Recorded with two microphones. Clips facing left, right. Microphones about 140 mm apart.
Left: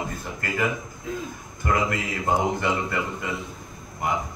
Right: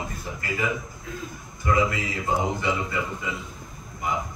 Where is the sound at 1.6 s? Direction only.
55° left (ahead or behind).